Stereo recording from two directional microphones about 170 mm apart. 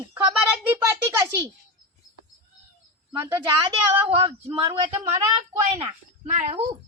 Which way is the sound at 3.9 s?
30° right (ahead or behind).